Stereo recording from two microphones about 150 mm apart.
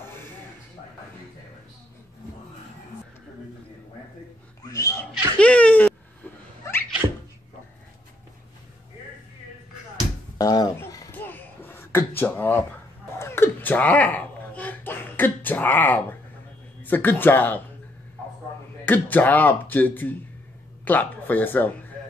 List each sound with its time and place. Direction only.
0.0 s a sound: 15° left (ahead or behind)
4.6 s a sound: 20° left (ahead or behind)
5.4 s a sound: 10° left (ahead or behind)
10.3 s speech: 25° left (ahead or behind)
11.1 s beatboxing: 15° left (ahead or behind)
12.2 s speech: 15° left (ahead or behind)
13.2 s babbling: 15° left (ahead or behind)
16.8 s speech: 15° left (ahead or behind)
18.9 s speech: 10° left (ahead or behind)